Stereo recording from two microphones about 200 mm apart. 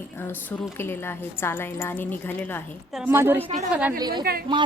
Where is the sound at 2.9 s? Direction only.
10° right (ahead or behind).